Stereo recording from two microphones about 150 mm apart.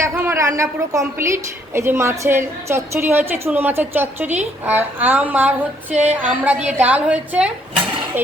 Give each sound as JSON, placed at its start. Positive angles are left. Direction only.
{"t": 0.0, "sound": "a woman's voice", "side_deg": -15}